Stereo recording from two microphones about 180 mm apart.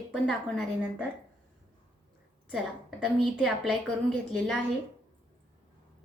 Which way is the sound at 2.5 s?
Centre (ahead or behind).